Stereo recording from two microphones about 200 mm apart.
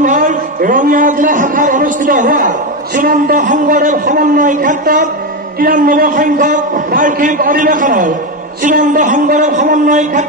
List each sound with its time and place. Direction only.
0.0 s a man's voice: 40° right (ahead or behind)